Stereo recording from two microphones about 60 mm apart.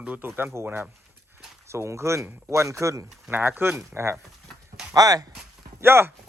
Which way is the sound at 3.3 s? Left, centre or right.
Right.